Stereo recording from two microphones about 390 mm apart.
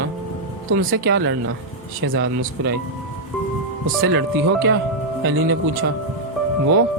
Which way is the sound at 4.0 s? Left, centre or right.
Right.